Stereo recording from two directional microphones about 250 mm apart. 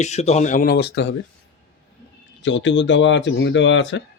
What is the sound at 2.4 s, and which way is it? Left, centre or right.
Speech, left.